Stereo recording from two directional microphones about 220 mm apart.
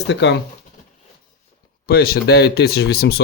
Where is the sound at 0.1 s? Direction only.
50° left (ahead or behind).